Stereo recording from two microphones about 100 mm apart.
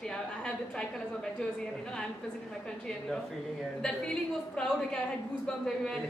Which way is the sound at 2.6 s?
5° left (ahead or behind).